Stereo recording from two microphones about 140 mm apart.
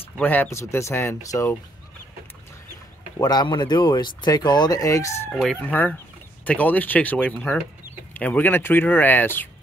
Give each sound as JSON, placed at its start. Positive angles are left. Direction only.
{"t": 0.2, "sound": "speech", "side_deg": 15}
{"t": 3.2, "sound": "speech", "side_deg": 30}
{"t": 5.6, "sound": "speech", "side_deg": 15}